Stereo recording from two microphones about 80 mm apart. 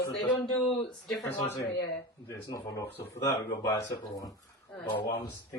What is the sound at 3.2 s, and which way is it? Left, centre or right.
A woman's voice, left.